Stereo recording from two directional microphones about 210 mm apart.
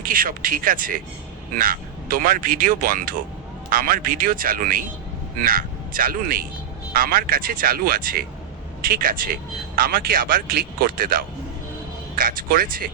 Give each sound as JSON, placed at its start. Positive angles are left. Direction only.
{"t": 0.0, "sound": "a man's voice", "side_deg": -40}